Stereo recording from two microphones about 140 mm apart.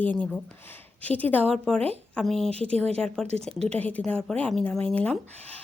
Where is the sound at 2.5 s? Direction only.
45° right (ahead or behind).